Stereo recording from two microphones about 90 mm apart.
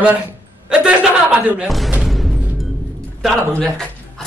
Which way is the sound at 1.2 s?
15° right (ahead or behind).